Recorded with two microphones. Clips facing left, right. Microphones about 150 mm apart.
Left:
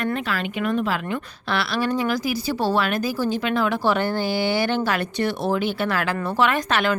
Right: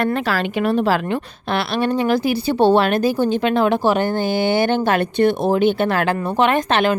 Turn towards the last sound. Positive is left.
turn(degrees=-25)  # may be behind; listen again after turning